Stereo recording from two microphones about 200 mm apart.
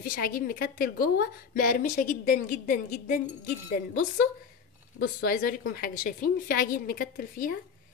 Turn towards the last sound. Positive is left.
turn(degrees=45)  # may be behind; listen again after turning